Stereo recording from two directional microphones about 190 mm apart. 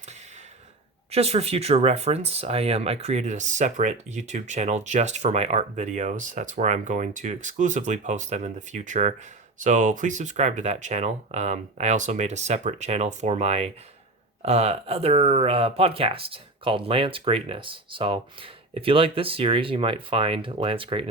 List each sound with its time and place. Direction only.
1.1 s speech: 30° right (ahead or behind)